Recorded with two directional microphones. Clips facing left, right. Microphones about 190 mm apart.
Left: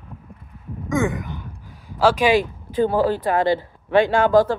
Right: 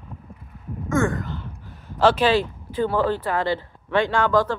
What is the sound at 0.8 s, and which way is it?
Sigh, 20° left (ahead or behind).